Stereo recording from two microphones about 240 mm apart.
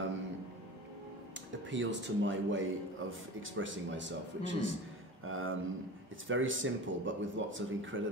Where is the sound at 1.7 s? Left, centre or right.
Right.